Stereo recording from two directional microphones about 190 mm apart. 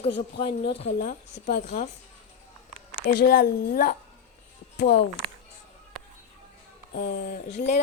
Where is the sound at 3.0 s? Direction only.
60° left (ahead or behind).